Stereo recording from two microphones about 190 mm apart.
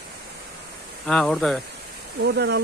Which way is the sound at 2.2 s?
60° right (ahead or behind).